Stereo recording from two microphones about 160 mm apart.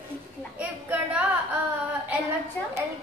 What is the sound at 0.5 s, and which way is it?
Speech, 10° right (ahead or behind).